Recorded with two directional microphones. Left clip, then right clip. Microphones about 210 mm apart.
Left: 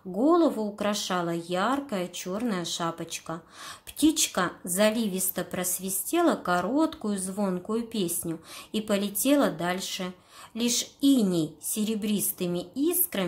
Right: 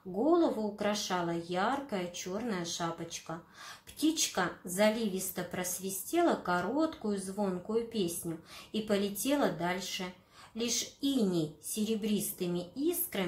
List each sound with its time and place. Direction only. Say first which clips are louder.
0.3 s speech: left 5 dB; 35° left (ahead or behind)